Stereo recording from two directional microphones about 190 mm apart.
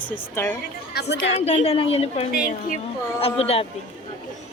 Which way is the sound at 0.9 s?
60° left (ahead or behind).